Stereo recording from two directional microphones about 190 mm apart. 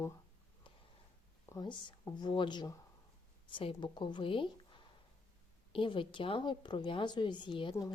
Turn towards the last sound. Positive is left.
turn(degrees=20)  # may be behind; listen again after turning